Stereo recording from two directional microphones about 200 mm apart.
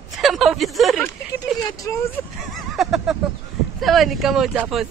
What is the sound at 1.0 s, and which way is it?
Speech, 15° left (ahead or behind).